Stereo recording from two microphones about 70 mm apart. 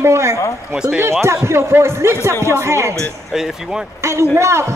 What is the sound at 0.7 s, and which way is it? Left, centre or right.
Speech, centre.